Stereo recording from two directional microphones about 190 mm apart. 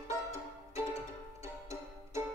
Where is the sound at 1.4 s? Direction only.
15° right (ahead or behind).